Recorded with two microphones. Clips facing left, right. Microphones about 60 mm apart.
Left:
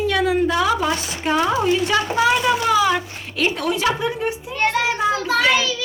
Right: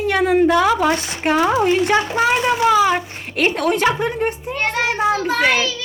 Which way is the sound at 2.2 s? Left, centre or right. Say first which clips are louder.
Right 2 dB; right.